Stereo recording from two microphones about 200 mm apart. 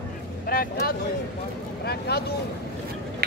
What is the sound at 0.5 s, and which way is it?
Speech, 50° left (ahead or behind).